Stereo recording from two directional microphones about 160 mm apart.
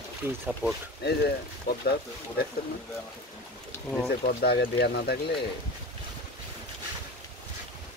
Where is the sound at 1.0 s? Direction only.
90° left.